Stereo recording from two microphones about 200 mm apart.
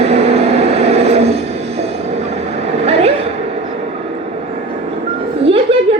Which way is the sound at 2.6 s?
30° right (ahead or behind).